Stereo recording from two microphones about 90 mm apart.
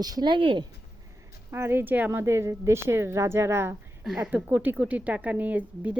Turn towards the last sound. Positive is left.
turn(degrees=-15)  # may be behind; listen again after turning